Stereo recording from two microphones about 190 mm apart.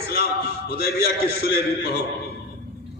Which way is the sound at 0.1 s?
55° left (ahead or behind).